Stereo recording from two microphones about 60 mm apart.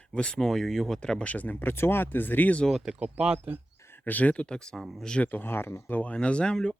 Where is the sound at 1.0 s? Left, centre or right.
Centre.